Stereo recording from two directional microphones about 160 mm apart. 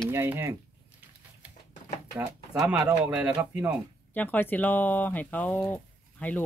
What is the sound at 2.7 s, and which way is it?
Speech, 10° right (ahead or behind).